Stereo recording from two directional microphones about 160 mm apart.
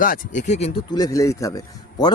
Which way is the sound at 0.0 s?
55° left (ahead or behind).